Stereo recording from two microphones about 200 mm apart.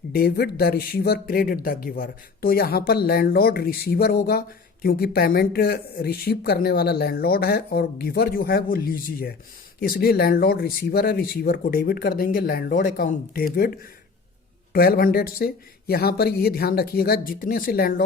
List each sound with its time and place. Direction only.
0.1 s speech: 50° left (ahead or behind)